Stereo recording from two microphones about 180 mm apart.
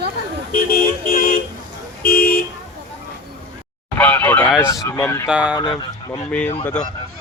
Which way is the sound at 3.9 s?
10° left (ahead or behind).